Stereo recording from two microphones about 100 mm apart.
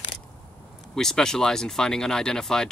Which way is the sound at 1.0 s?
5° left (ahead or behind).